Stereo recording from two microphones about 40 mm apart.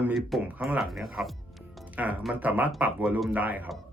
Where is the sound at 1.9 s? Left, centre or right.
Right.